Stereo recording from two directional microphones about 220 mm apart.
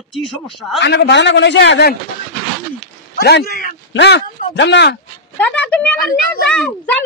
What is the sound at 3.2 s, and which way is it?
A man's voice, 45° left (ahead or behind).